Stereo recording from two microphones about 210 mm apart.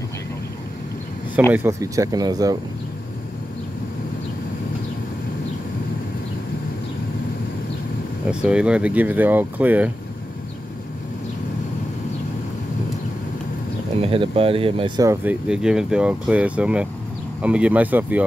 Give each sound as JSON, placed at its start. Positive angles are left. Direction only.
{"t": 1.5, "sound": "speech", "side_deg": -10}
{"t": 8.3, "sound": "speech", "side_deg": -5}
{"t": 14.0, "sound": "speech", "side_deg": -25}
{"t": 15.0, "sound": "speech", "side_deg": -5}